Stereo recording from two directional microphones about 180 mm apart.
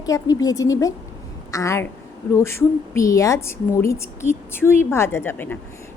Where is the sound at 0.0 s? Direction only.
20° left (ahead or behind).